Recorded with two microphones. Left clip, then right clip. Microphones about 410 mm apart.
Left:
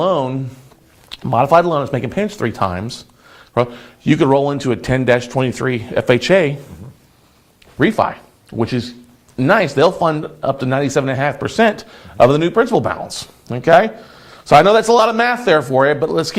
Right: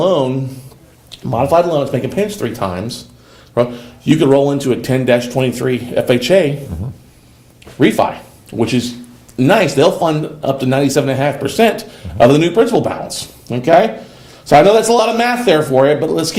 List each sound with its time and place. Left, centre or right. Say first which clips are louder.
0.0 s a sound: right 3 dB; left
1.1 s speech: left 1 dB; left
7.8 s speech: right 2 dB; left